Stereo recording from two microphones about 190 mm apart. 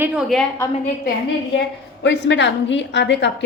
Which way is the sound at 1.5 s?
70° left (ahead or behind).